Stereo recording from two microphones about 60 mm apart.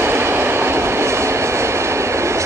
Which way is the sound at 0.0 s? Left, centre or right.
Right.